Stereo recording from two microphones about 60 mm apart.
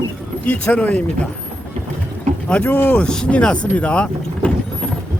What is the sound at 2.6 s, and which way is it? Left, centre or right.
Speech, left.